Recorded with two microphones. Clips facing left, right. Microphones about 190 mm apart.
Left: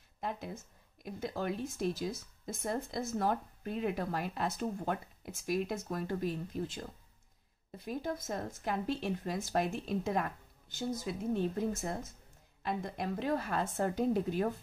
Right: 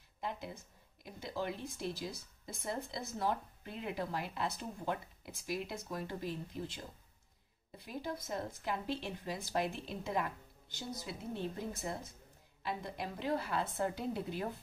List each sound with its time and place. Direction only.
1.2 s speech: 45° left (ahead or behind)